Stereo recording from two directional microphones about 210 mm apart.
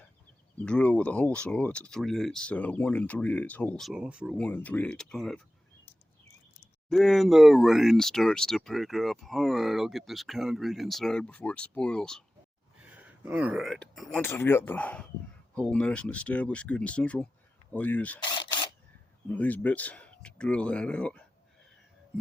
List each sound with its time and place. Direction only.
0.6 s speech: 5° left (ahead or behind)
4.4 s speech: 5° left (ahead or behind)
6.9 s speech: centre (ahead or behind)
12.8 s speech: 5° right (ahead or behind)
18.2 s single-lens reflex camera: 20° left (ahead or behind)
19.3 s speech: 10° left (ahead or behind)